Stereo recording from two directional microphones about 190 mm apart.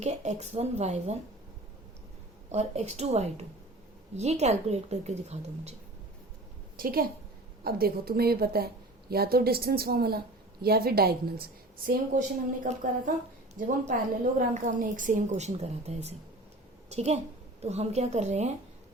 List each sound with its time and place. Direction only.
0.0 s a woman's voice: 35° right (ahead or behind)
2.5 s a woman's voice: 35° right (ahead or behind)
6.7 s a woman's voice: 50° right (ahead or behind)
12.6 s a woman's voice: 45° right (ahead or behind)